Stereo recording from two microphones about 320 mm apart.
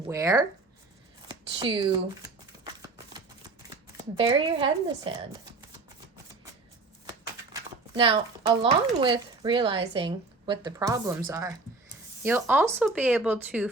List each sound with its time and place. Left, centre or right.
0.1 s speech: centre
2.8 s shuffling cards: centre
3.9 s speech: centre
7.5 s speech: centre